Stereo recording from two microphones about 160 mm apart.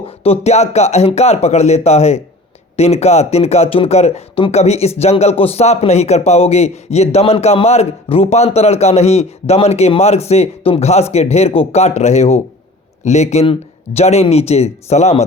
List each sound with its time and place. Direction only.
0.0 s speech: 40° left (ahead or behind)